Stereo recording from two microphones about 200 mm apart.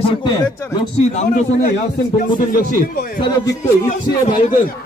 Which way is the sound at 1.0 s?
35° left (ahead or behind).